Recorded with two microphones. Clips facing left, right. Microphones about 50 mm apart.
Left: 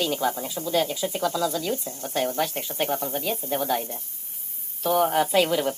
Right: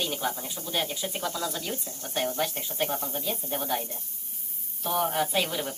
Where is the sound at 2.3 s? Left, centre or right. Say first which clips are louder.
Left 3 dB; left.